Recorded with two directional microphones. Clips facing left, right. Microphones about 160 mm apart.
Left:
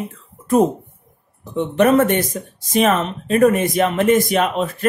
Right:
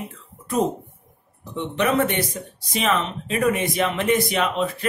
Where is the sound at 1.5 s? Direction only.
45° left (ahead or behind).